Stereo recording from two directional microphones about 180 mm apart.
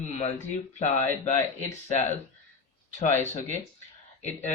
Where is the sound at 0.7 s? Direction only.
40° left (ahead or behind).